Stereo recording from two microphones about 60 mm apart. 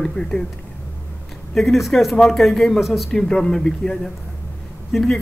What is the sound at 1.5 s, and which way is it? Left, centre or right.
A man's voice, centre.